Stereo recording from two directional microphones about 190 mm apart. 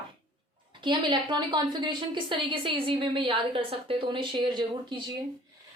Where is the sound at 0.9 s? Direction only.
25° right (ahead or behind).